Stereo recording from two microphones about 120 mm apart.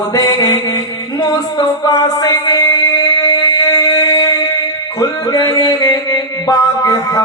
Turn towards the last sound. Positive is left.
turn(degrees=30)  # may be behind; listen again after turning